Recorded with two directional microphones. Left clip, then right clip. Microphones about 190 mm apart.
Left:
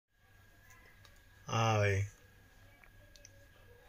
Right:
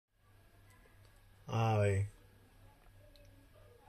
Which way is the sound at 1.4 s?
10° left (ahead or behind).